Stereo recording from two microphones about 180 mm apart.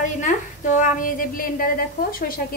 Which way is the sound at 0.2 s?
45° left (ahead or behind).